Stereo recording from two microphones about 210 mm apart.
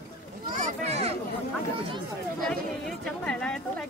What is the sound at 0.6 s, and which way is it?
Speech, 35° right (ahead or behind).